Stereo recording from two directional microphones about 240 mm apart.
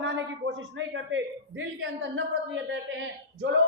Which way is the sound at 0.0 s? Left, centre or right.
Right.